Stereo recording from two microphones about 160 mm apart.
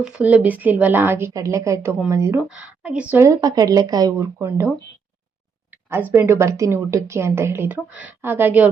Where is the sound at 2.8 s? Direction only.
10° right (ahead or behind).